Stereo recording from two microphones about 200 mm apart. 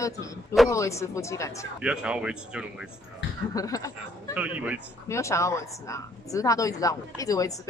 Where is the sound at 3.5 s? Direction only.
15° left (ahead or behind).